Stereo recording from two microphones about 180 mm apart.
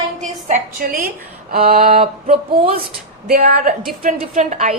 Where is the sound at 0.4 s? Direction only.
45° right (ahead or behind).